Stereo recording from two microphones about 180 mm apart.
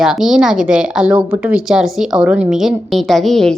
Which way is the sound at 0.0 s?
5° right (ahead or behind).